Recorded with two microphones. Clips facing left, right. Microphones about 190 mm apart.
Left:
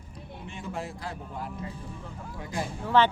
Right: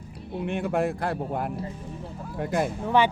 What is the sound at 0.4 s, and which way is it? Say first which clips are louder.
Speech: right 11 dB; 60° right (ahead or behind).